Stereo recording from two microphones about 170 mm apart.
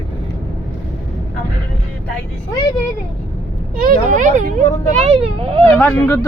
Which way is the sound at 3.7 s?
55° right (ahead or behind).